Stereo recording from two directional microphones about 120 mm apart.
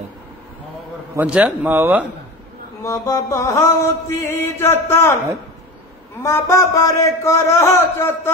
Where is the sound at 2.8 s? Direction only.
25° left (ahead or behind).